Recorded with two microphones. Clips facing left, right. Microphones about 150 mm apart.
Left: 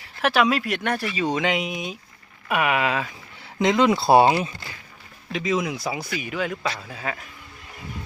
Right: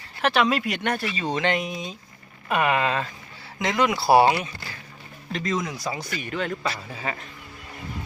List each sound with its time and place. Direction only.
0.2 s speech: centre (ahead or behind)
3.6 s speech: 20° left (ahead or behind)
5.3 s speech: 5° left (ahead or behind)